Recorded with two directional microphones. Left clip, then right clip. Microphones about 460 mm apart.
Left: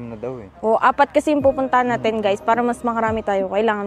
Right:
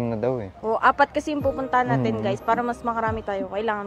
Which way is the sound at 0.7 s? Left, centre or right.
Left.